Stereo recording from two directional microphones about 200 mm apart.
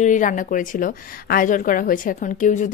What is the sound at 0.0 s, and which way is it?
A woman's voice, 40° left (ahead or behind).